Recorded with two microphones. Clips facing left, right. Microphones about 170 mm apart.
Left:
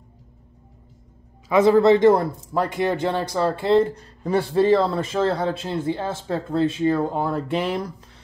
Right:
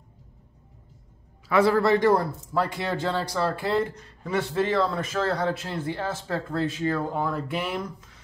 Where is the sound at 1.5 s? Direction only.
20° left (ahead or behind).